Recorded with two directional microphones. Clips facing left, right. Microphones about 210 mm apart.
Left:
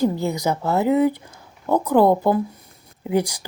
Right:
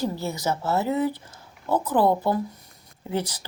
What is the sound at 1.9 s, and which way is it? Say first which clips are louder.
Speech: left 6 dB; 50° left (ahead or behind).